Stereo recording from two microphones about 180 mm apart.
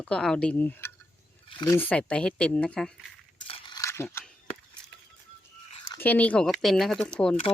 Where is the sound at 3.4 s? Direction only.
30° left (ahead or behind); by 4.2 s 15° left (ahead or behind).